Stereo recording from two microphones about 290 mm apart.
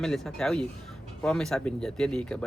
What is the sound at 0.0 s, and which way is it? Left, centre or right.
Speech, centre.